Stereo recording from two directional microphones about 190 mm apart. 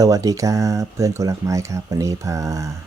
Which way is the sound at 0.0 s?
20° right (ahead or behind).